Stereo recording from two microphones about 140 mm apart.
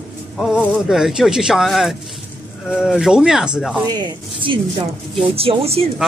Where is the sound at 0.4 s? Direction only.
5° right (ahead or behind).